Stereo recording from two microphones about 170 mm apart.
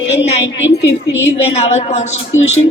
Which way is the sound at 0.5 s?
90° left.